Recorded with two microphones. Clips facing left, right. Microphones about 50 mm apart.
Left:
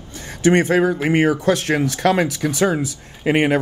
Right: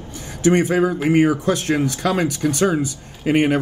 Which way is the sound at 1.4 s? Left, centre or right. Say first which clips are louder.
Left 2 dB; left.